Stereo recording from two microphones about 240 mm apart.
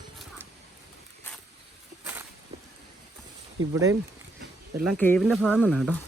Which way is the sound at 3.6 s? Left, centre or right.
Right.